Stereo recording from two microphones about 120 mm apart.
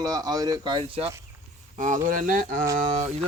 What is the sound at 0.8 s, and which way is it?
Speech, 55° right (ahead or behind).